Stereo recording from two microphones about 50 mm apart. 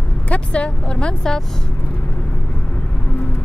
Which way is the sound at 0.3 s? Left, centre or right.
Left.